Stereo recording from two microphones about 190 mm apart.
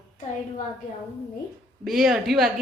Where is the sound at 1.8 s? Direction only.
Centre (ahead or behind).